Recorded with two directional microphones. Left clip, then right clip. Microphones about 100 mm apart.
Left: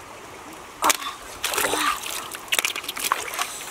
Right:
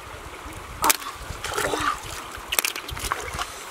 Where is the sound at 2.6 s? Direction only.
15° right (ahead or behind).